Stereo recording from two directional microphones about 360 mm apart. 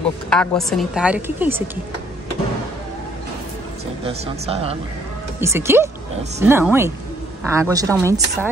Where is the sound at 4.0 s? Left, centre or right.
Centre.